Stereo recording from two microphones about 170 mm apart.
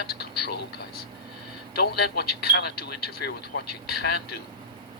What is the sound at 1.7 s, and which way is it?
Speech, 70° left (ahead or behind).